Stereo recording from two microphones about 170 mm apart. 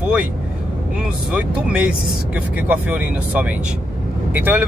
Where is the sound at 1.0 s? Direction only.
5° right (ahead or behind).